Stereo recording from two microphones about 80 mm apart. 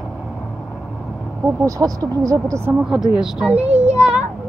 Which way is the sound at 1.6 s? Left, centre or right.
Right.